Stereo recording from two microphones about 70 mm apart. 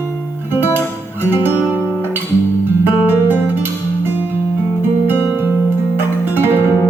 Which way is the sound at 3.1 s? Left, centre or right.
Right.